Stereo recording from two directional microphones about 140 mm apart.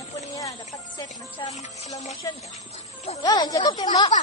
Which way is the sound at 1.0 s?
55° left (ahead or behind).